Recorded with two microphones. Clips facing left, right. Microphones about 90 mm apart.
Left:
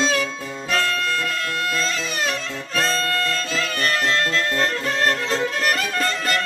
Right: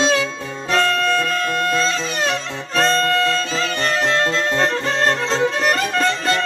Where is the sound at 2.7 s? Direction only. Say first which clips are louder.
Right 5 dB; 40° right (ahead or behind).